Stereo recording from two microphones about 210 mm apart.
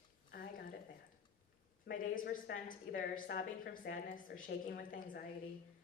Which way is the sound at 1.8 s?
40° left (ahead or behind).